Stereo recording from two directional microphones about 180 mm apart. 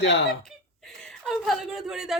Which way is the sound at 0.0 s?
75° left (ahead or behind).